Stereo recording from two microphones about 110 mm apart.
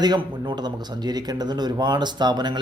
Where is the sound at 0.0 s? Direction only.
45° right (ahead or behind).